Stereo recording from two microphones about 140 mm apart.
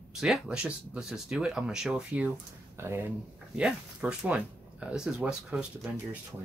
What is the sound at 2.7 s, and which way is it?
Speech, 20° right (ahead or behind).